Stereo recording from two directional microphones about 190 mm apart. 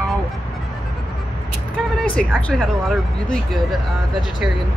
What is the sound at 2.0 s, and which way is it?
Speech, 5° left (ahead or behind).